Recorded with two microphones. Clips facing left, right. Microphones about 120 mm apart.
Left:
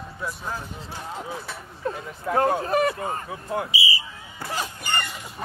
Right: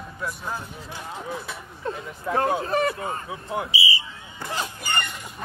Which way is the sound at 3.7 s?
25° right (ahead or behind).